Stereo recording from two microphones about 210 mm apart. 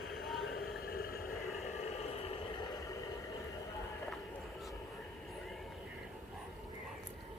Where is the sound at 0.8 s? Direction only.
45° left (ahead or behind).